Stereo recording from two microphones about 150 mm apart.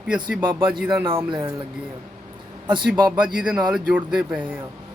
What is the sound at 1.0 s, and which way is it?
Speech, 35° right (ahead or behind).